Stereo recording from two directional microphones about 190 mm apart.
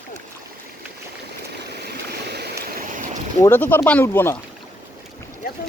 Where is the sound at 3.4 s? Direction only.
10° left (ahead or behind).